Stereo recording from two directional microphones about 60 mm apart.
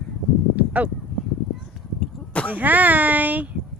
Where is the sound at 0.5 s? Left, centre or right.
Right.